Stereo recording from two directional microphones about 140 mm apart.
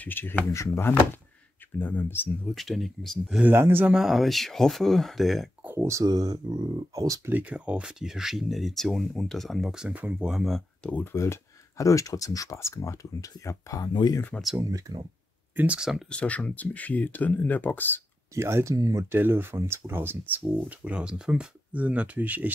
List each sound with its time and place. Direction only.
0.0 s speech: 15° left (ahead or behind)
2.4 s speech: centre (ahead or behind)
3.4 s speech: 15° right (ahead or behind)
3.9 s speech: centre (ahead or behind)
5.6 s speech: 15° right (ahead or behind)
7.3 s speech: 10° right (ahead or behind); by 14.2 s 30° left (ahead or behind)
14.6 s speech: 25° right (ahead or behind)
15.5 s speech: 10° right (ahead or behind)
16.1 s speech: 10° left (ahead or behind)
18.3 s speech: 20° right (ahead or behind)